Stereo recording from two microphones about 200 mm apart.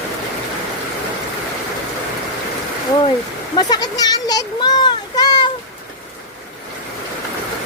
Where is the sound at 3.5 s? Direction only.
20° left (ahead or behind).